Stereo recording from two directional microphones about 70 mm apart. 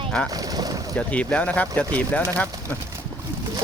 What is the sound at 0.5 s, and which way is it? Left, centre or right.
Boat, right.